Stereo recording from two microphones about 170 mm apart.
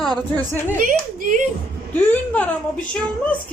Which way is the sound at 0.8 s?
50° right (ahead or behind).